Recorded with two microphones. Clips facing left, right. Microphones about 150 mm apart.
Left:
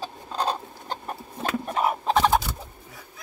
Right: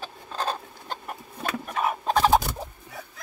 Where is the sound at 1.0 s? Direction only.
30° left (ahead or behind).